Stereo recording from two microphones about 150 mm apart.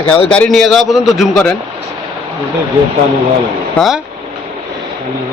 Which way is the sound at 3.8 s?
Centre (ahead or behind).